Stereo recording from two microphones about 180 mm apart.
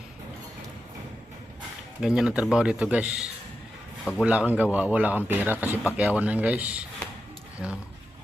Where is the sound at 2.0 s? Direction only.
5° right (ahead or behind).